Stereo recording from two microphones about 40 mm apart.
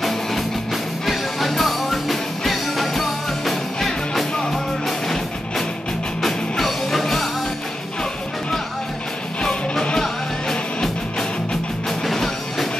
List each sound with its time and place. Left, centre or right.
0.0 s music: centre
6.2 s music: centre
9.4 s music: centre